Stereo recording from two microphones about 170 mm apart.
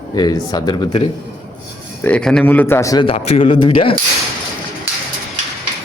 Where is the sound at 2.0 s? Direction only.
5° left (ahead or behind); by 3.1 s 25° left (ahead or behind).